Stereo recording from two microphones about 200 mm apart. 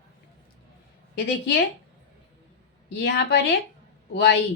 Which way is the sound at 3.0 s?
55° left (ahead or behind).